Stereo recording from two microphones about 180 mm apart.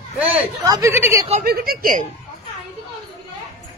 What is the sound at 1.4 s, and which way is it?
Speech, 55° right (ahead or behind).